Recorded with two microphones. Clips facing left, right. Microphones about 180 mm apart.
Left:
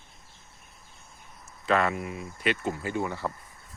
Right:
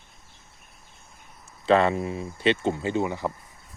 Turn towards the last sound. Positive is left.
turn(degrees=-20)  # may be behind; listen again after turning